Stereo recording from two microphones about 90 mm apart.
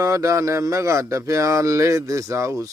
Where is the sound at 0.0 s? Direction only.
35° right (ahead or behind).